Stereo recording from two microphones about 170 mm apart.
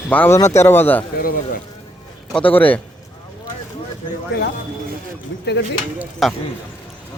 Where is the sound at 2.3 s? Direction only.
10° left (ahead or behind).